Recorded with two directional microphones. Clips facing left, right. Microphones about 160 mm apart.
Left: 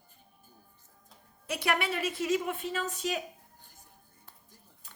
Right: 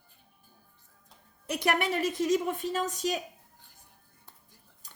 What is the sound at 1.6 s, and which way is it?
A woman's voice, 45° right (ahead or behind).